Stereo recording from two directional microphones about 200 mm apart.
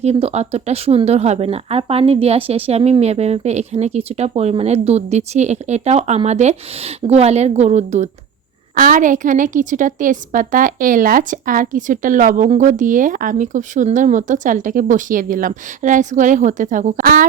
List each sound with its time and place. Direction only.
0.0 s a woman's voice: 30° right (ahead or behind)